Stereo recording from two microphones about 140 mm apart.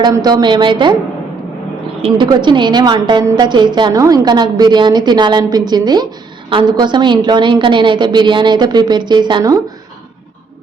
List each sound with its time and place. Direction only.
0.0 s a woman's voice: 30° right (ahead or behind)
2.0 s a woman's voice: 40° right (ahead or behind)